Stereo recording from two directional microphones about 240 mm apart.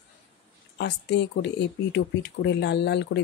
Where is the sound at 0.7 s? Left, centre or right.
Left.